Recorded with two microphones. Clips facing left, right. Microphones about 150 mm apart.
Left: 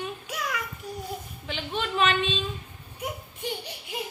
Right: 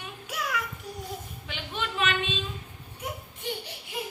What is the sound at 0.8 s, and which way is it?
Speech, centre (ahead or behind).